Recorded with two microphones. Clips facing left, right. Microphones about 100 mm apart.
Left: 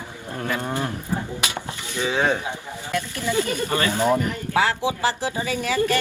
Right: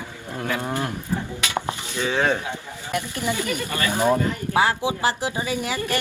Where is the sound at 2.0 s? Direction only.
15° left (ahead or behind).